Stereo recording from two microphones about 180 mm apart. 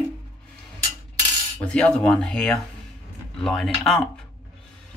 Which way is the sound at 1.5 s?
5° left (ahead or behind).